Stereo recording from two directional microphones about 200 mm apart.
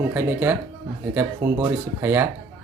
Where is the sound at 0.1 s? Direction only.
10° right (ahead or behind).